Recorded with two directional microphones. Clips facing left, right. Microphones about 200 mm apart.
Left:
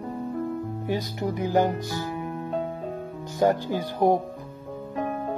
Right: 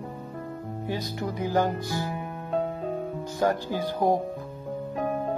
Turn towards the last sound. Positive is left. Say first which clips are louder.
# left 2 dB
turn(degrees=15)  # may be behind; listen again after turning